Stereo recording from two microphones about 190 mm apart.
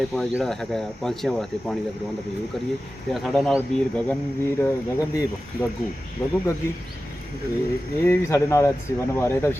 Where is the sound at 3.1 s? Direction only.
Centre (ahead or behind).